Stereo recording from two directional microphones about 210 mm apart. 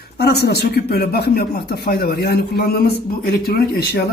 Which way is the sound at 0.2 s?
50° left (ahead or behind).